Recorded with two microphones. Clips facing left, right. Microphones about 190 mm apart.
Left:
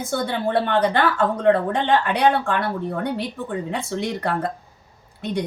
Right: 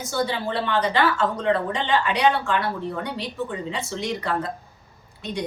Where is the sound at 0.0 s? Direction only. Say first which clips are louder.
Left 2 dB; 55° left (ahead or behind).